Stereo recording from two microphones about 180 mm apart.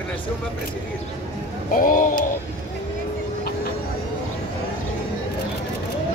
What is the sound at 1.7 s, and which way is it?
Speech, 50° left (ahead or behind).